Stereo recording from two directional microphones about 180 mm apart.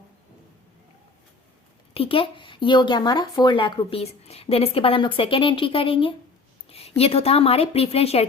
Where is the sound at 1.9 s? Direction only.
30° left (ahead or behind).